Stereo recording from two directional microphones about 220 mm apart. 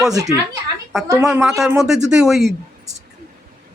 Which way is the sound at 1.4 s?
Centre (ahead or behind).